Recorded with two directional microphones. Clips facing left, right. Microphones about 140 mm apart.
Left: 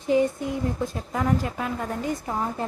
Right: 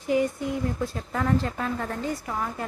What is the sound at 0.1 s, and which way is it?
A woman's voice, 25° left (ahead or behind).